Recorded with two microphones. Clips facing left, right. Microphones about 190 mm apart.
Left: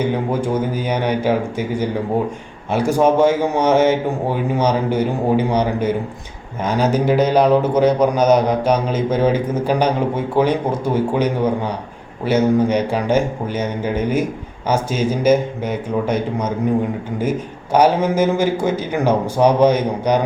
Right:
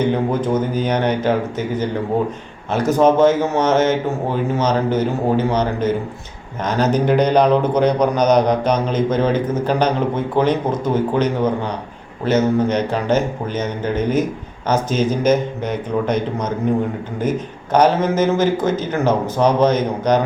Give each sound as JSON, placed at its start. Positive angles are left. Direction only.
{"t": 0.0, "sound": "speech", "side_deg": 10}